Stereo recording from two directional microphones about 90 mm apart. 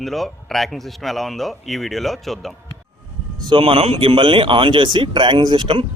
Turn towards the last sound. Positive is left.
turn(degrees=-65)  # may be behind; listen again after turning